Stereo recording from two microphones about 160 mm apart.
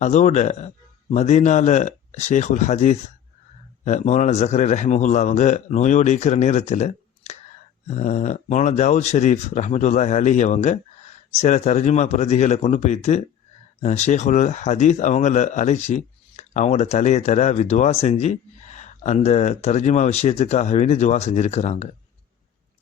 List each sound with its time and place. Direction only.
0.0 s speech: 45° left (ahead or behind)